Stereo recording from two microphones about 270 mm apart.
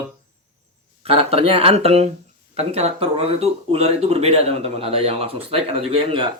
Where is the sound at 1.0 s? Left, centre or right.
Right.